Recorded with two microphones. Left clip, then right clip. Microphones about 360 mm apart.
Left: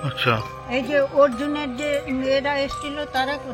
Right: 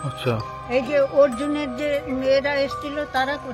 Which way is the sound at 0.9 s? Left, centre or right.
Centre.